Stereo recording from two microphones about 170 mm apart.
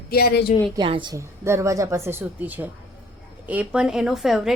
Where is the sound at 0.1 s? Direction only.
65° left (ahead or behind).